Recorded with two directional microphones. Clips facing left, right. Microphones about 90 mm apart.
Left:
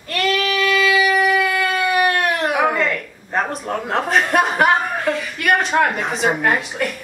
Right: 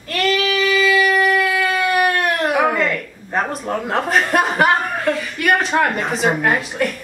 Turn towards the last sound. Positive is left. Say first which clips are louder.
# right 1 dB
turn(degrees=0)  # may be behind; listen again after turning